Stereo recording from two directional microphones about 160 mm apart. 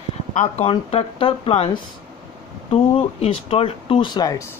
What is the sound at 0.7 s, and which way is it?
Speech, 35° left (ahead or behind).